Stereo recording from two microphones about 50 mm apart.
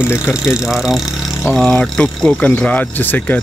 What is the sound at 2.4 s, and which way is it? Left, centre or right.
Speech, left.